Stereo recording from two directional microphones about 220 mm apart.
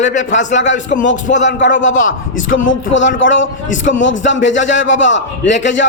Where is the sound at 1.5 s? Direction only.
55° left (ahead or behind).